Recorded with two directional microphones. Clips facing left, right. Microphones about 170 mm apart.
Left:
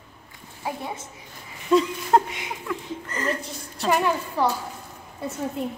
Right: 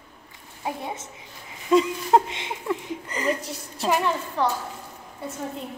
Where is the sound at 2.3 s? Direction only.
25° right (ahead or behind).